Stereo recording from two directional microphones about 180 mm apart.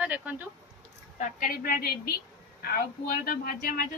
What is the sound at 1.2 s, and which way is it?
Speech, 45° left (ahead or behind).